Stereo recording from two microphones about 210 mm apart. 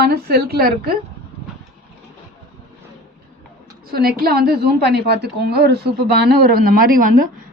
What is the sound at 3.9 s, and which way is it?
A woman's voice, 45° right (ahead or behind).